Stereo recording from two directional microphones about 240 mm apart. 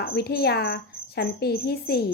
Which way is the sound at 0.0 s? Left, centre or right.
Left.